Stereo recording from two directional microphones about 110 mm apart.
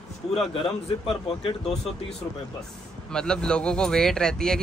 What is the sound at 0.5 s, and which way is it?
Speech, 55° left (ahead or behind).